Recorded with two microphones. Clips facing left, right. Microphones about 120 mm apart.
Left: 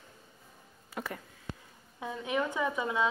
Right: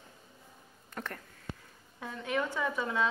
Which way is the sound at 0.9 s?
10° left (ahead or behind).